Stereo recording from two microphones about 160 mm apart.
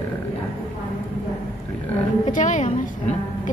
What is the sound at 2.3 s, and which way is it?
Speech, 50° left (ahead or behind).